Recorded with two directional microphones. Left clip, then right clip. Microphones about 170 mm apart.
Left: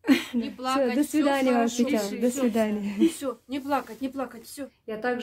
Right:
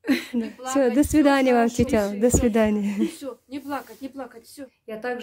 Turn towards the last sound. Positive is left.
turn(degrees=-10)  # may be behind; listen again after turning